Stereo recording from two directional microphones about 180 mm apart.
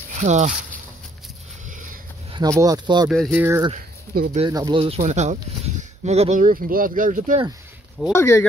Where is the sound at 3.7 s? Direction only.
55° right (ahead or behind).